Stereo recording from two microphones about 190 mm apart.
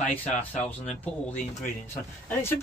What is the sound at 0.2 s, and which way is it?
Speech, 10° left (ahead or behind).